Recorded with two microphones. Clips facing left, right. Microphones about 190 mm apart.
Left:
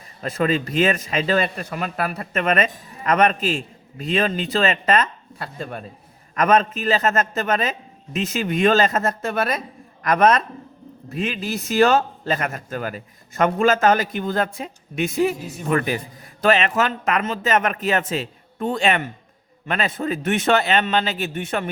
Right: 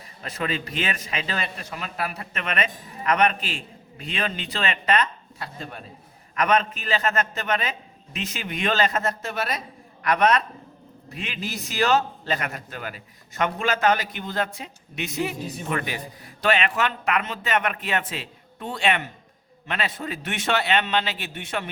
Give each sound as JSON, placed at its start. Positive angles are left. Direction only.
{"t": 0.2, "sound": "a man's voice", "side_deg": 40}